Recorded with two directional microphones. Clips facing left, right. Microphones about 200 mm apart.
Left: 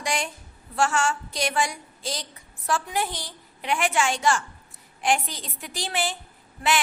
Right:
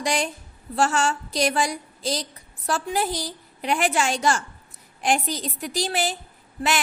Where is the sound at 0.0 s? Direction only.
35° right (ahead or behind).